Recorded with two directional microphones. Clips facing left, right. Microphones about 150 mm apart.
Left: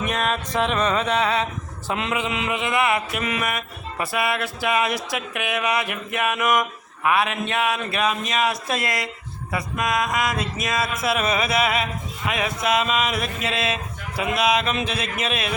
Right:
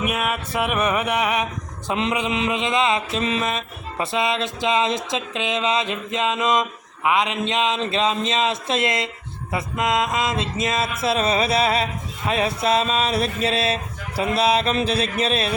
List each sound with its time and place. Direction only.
0.0 s music: 10° right (ahead or behind)
1.9 s mantra: 20° right (ahead or behind)